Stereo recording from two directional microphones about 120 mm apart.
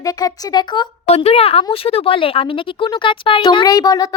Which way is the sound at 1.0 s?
60° left (ahead or behind).